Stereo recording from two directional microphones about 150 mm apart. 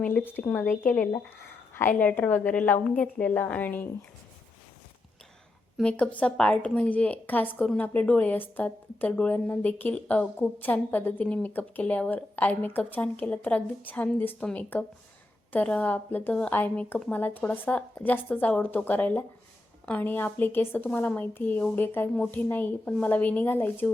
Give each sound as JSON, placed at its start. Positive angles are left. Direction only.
{"t": 0.0, "sound": "a woman's voice", "side_deg": 10}
{"t": 5.7, "sound": "a woman's voice", "side_deg": 10}